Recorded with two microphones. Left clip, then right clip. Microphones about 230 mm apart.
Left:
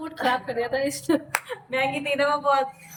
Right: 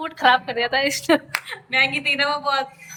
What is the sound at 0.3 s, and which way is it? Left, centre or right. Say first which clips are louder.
Speech: right 7 dB; centre.